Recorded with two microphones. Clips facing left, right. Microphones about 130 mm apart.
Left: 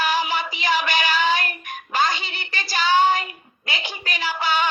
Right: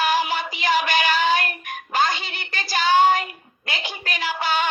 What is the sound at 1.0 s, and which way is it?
Child singing, 45° right (ahead or behind).